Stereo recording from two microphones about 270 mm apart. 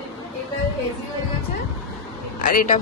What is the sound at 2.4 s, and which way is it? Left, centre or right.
Speech, left.